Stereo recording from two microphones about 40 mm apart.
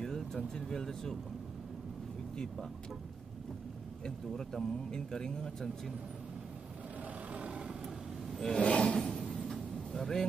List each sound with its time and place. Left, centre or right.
0.0 s vehicle: centre
0.7 s speech: centre
2.3 s speech: centre
4.0 s speech: centre
7.3 s vehicle: right
8.4 s a sound: centre
9.3 s vehicle: centre